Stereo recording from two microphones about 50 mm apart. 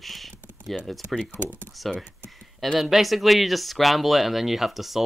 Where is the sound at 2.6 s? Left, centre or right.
Centre.